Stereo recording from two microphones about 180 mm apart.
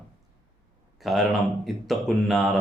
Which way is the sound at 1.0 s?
Centre (ahead or behind).